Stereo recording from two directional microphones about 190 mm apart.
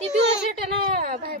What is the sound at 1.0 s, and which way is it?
Speech, 50° right (ahead or behind).